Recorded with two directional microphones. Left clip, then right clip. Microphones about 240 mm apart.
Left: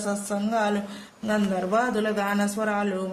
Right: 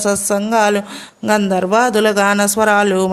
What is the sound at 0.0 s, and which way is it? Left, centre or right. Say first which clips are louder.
A man's voice: right 12 dB; right.